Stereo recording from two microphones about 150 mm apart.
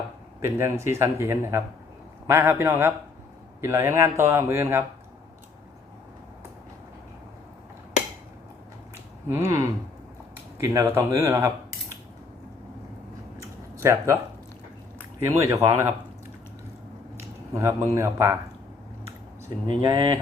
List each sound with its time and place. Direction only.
0.4 s speech: 15° right (ahead or behind)
9.3 s speech: 20° right (ahead or behind)
13.4 s a sound: 20° right (ahead or behind)
15.4 s speech: 20° right (ahead or behind)
17.2 s speech: 20° right (ahead or behind)
19.6 s speech: 35° right (ahead or behind)